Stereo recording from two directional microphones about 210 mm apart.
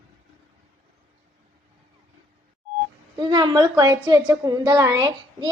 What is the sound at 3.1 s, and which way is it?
A woman's voice, 20° right (ahead or behind).